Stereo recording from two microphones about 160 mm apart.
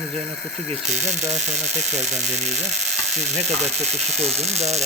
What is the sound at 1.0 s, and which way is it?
Speech, 45° right (ahead or behind).